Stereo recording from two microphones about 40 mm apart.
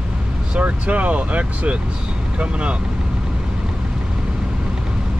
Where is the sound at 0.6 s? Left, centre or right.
Right.